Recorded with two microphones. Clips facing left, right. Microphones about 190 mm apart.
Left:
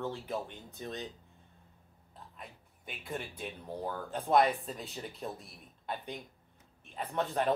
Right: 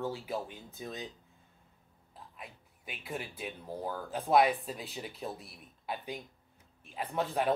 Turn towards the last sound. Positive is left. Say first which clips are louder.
# even
turn(degrees=-5)  # may be behind; listen again after turning